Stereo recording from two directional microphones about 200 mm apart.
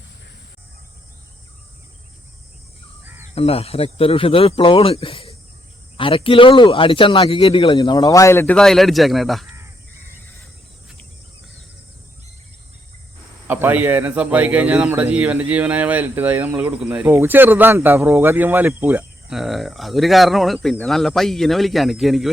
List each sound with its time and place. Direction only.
3.3 s speech: 30° left (ahead or behind); by 9.5 s centre (ahead or behind)
13.5 s a man's voice: 10° right (ahead or behind)